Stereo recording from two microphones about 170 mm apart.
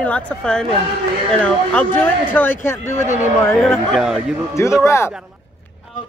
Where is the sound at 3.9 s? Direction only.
5° right (ahead or behind).